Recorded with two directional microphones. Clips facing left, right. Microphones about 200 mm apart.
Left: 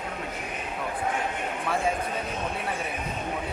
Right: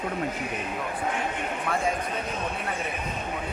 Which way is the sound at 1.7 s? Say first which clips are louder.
Even; 5° left (ahead or behind).